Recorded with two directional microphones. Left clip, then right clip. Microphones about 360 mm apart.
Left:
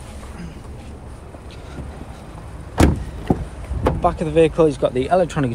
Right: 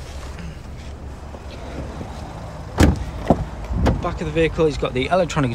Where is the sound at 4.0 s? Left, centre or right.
Centre.